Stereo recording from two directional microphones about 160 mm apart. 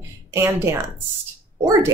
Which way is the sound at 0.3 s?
15° right (ahead or behind).